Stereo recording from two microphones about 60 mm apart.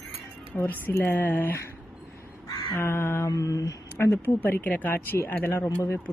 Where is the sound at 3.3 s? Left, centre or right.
Left.